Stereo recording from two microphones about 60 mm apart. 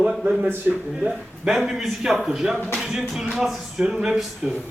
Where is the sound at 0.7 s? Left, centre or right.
Right.